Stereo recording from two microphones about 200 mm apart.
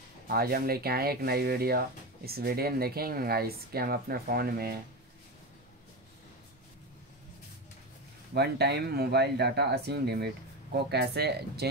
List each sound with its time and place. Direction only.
0.3 s speech: 50° right (ahead or behind)
8.4 s speech: 55° right (ahead or behind)